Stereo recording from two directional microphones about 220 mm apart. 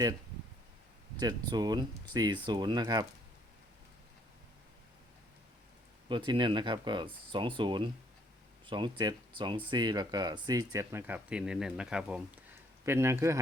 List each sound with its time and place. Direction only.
1.2 s speech: 20° right (ahead or behind)
6.1 s speech: 20° right (ahead or behind)